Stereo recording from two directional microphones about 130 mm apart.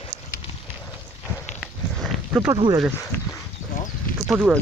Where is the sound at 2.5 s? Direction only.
35° right (ahead or behind).